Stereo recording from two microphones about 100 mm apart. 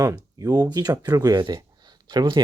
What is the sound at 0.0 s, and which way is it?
Speech, 35° right (ahead or behind).